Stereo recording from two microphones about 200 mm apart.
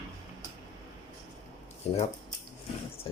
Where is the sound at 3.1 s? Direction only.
25° left (ahead or behind).